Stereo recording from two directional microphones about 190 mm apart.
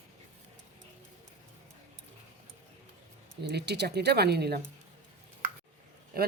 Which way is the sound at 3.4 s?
60° right (ahead or behind).